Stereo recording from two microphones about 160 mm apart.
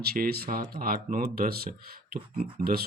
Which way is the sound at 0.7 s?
65° right (ahead or behind).